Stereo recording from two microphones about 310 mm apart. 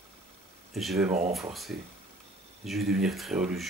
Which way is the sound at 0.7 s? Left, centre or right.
Centre.